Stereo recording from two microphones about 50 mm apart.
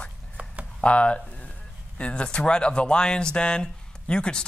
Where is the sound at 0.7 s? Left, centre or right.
Left.